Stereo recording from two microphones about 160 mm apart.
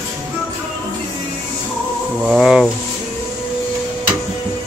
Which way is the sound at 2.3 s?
5° right (ahead or behind).